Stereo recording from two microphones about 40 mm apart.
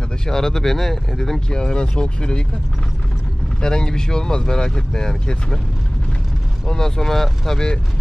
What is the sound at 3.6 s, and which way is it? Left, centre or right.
Speech, centre.